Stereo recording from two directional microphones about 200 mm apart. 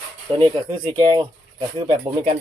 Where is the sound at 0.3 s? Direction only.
25° right (ahead or behind).